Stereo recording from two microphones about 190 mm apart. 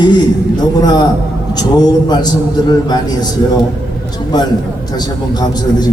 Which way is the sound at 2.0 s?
20° left (ahead or behind).